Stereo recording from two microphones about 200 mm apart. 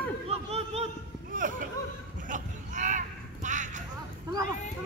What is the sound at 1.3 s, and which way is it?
Speech, 40° right (ahead or behind).